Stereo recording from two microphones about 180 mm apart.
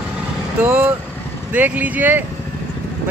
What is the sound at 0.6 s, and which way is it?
Speech, 10° right (ahead or behind).